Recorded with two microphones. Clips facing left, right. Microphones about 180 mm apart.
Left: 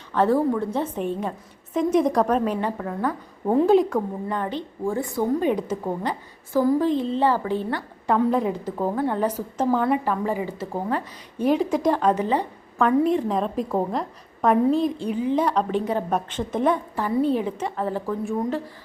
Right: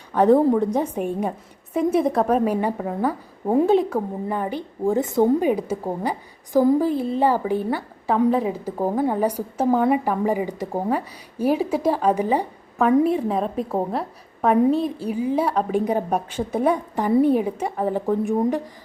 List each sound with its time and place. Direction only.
0.1 s a woman's voice: 15° right (ahead or behind)
5.4 s a woman's voice: 10° right (ahead or behind)